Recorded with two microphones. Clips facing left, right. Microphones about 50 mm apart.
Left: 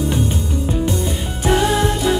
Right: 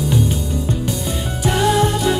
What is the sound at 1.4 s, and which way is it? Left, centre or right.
Music, left.